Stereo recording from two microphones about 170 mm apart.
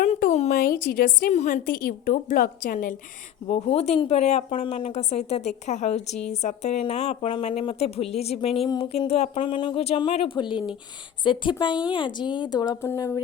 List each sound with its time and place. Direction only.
0.0 s a sound: 40° left (ahead or behind)
0.5 s a woman's voice: 60° left (ahead or behind)
1.3 s a woman's voice: 40° left (ahead or behind)
1.7 s a woman's voice: 60° left (ahead or behind)
3.4 s a woman's voice: 35° left (ahead or behind); by 13.1 s 15° left (ahead or behind)